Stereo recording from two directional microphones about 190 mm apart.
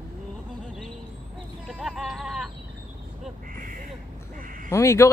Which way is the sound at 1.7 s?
Centre (ahead or behind).